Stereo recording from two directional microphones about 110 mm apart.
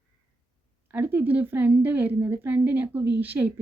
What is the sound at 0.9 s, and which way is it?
Speech, 15° right (ahead or behind).